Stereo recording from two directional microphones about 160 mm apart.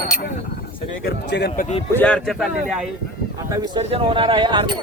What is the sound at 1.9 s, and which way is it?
Speech, 5° left (ahead or behind).